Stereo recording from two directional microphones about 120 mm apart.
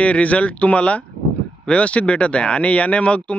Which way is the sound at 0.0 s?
10° left (ahead or behind).